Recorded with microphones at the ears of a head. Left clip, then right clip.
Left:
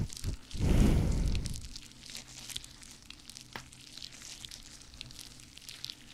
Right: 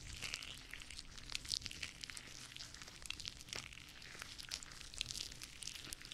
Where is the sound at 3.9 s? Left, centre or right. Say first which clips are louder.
Left 9 dB; left.